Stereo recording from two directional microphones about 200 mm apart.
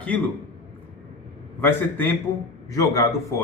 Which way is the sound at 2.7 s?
15° left (ahead or behind).